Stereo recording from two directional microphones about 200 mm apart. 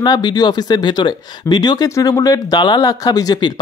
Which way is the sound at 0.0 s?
20° left (ahead or behind).